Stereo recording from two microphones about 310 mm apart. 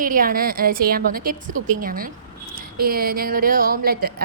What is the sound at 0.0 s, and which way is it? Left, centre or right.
A woman's voice, right.